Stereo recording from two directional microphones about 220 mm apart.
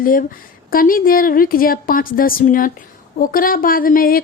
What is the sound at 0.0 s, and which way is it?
Speech, 40° left (ahead or behind).